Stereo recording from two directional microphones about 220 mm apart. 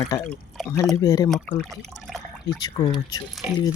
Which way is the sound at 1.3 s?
Centre (ahead or behind).